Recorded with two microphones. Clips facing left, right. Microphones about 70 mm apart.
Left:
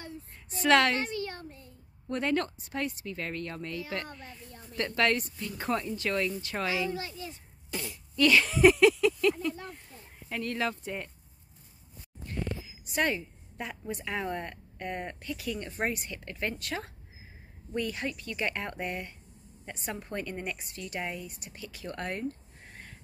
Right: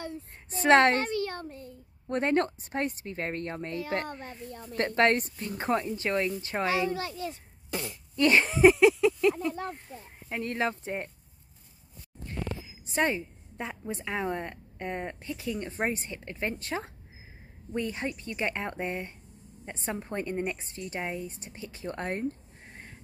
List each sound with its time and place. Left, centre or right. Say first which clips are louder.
0.5 s speech: right 3 dB; right
0.9 s a sound: right 4 dB; right
2.0 s a woman's voice: right 3 dB; right
6.9 s a child's voice: right 4 dB; right
8.2 s a sound: right 1 dB; right
10.3 s a woman's voice: right 2 dB; right
12.8 s a woman's voice: right 2 dB; right